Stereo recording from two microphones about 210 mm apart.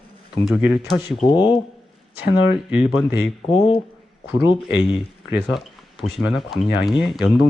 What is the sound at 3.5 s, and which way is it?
Speech, 25° left (ahead or behind).